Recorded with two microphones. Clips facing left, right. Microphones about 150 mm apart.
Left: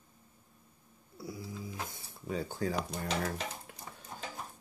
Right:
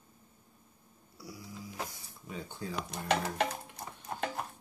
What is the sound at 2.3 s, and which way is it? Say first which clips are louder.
Speech: left 7 dB; 40° left (ahead or behind).